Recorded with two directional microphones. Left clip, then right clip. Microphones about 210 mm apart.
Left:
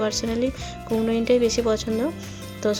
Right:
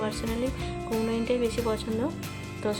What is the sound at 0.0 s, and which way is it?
Speech, 20° left (ahead or behind).